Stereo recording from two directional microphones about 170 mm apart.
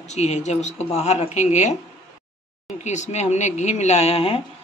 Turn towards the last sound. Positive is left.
turn(degrees=35)  # may be behind; listen again after turning